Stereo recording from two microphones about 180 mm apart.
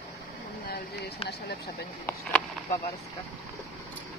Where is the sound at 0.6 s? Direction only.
60° left (ahead or behind).